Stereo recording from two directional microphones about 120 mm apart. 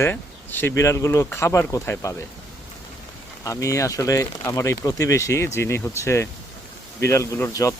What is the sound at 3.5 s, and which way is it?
Speech, 25° left (ahead or behind).